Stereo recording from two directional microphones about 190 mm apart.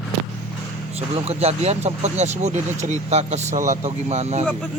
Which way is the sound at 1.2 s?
35° right (ahead or behind).